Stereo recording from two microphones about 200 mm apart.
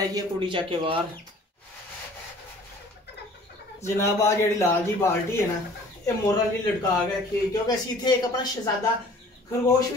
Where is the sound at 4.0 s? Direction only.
15° left (ahead or behind).